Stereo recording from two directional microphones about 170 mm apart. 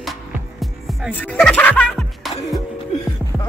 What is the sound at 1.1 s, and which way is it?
Speech, 10° left (ahead or behind).